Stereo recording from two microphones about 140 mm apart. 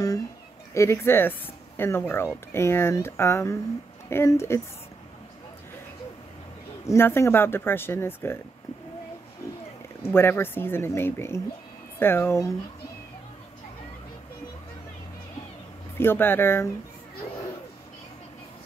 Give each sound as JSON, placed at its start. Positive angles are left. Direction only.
{"t": 0.7, "sound": "speech", "side_deg": 20}
{"t": 6.9, "sound": "speech", "side_deg": 15}
{"t": 10.0, "sound": "speech", "side_deg": 15}
{"t": 16.0, "sound": "speech", "side_deg": 15}